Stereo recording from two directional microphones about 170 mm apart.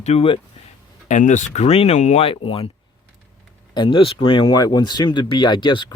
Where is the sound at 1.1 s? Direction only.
45° left (ahead or behind).